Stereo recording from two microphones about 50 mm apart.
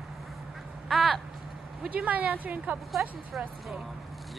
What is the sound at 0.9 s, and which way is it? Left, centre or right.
Speech, centre.